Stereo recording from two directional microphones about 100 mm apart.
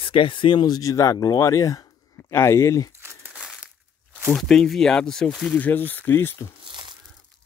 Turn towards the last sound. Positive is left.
turn(degrees=-50)  # may be behind; listen again after turning